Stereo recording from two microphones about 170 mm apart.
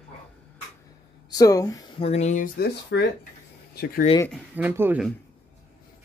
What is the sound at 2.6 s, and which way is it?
Speech, 70° left (ahead or behind).